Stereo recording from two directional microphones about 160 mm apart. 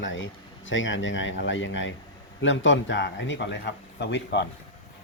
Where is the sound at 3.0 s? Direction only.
90° left.